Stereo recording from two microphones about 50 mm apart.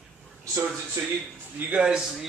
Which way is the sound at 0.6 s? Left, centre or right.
Right.